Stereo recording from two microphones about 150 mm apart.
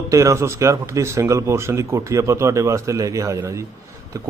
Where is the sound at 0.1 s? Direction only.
20° right (ahead or behind).